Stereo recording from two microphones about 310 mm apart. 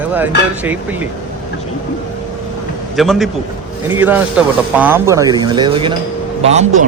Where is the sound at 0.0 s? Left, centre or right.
Centre.